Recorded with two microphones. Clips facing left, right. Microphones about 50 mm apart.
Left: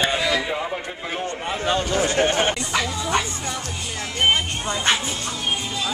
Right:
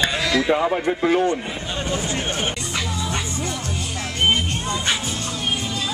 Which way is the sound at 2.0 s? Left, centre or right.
Left.